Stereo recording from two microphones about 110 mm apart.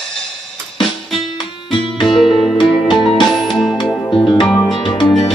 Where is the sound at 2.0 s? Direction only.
Centre (ahead or behind).